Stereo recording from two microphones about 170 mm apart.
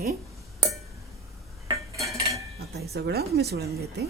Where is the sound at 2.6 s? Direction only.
70° right (ahead or behind).